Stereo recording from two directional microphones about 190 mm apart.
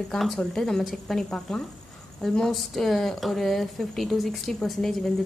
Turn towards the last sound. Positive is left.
turn(degrees=0)  # may be behind; listen again after turning